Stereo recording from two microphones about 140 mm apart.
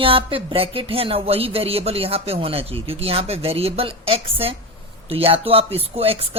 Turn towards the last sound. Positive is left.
turn(degrees=-45)  # may be behind; listen again after turning